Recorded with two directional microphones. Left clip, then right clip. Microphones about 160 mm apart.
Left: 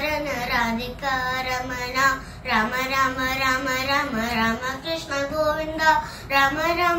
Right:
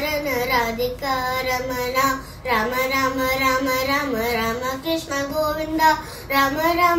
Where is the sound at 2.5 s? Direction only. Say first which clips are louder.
Right 2 dB; 25° right (ahead or behind).